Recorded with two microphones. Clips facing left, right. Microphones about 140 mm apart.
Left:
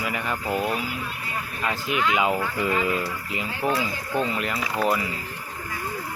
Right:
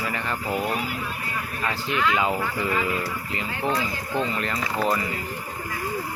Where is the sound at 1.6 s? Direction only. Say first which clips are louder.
Even; 15° left (ahead or behind).